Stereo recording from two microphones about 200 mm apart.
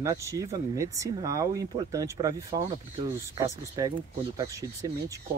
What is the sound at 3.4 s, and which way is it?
Speech, 15° right (ahead or behind).